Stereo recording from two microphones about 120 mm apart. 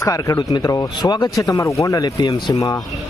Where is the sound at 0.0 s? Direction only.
30° left (ahead or behind).